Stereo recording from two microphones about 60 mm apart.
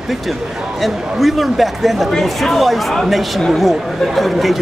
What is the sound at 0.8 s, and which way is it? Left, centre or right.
Speech, centre.